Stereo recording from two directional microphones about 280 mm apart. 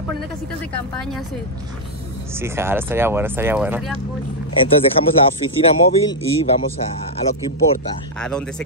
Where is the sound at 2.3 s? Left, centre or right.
Centre.